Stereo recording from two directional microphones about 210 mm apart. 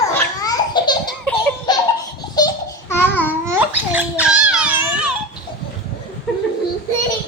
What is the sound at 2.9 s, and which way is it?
Babbling, 10° left (ahead or behind).